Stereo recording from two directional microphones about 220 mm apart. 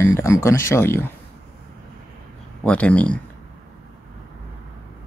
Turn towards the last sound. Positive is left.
turn(degrees=5)  # may be behind; listen again after turning